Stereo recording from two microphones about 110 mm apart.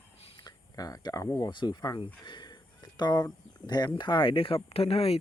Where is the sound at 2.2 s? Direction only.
40° left (ahead or behind).